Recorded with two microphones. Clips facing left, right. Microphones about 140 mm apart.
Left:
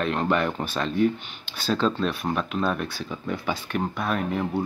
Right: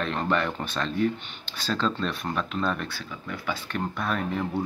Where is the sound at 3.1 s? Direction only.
25° left (ahead or behind).